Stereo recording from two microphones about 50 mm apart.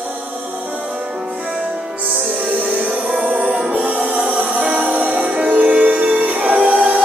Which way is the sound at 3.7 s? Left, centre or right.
Right.